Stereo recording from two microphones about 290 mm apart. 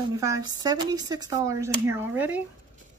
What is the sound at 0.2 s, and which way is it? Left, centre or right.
Speech, centre.